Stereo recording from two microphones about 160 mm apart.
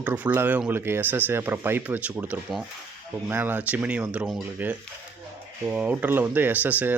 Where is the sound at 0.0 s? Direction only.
10° right (ahead or behind).